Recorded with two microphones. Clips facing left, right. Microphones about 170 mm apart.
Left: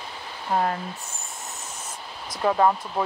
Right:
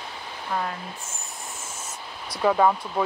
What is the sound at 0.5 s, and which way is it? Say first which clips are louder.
Speech: left 5 dB; 35° left (ahead or behind).